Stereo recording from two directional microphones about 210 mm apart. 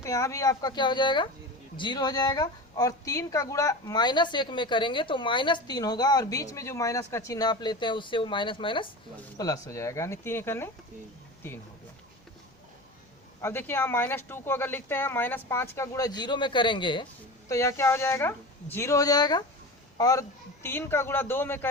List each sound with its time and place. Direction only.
0.0 s a woman's voice: 15° left (ahead or behind)
13.4 s speech: 10° left (ahead or behind)